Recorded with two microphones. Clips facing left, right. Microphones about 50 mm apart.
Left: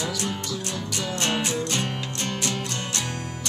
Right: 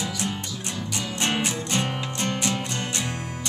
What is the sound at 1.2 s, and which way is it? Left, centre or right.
Music, centre.